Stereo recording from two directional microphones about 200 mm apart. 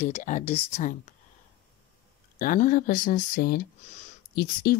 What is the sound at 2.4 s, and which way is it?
Speech, 40° left (ahead or behind).